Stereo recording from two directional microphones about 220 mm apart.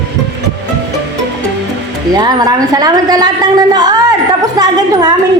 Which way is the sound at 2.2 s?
15° right (ahead or behind).